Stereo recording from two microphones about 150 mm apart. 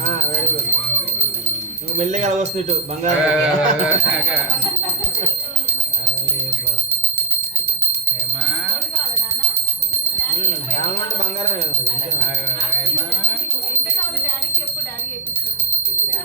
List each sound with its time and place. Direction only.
2.0 s speech: 50° right (ahead or behind)
3.2 s bell: 5° right (ahead or behind)